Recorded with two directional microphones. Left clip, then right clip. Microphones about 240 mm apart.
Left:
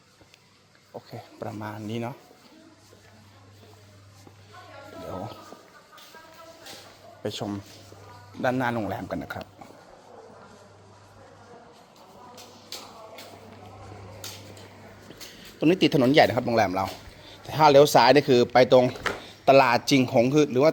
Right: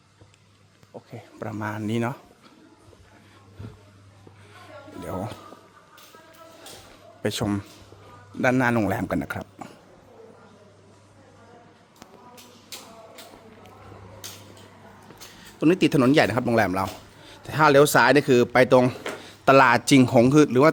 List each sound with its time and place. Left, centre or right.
0.9 s speech: right
7.2 s speech: right
15.6 s speech: centre